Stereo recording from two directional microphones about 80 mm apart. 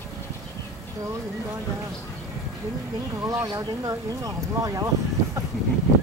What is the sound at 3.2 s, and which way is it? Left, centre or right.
Speech, right.